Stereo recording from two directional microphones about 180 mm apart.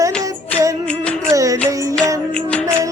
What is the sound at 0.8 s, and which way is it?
Music, 5° left (ahead or behind).